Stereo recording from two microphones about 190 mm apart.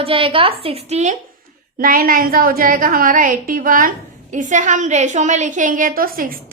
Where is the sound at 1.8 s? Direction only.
50° right (ahead or behind).